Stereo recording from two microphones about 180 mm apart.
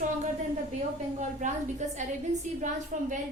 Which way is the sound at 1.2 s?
45° right (ahead or behind).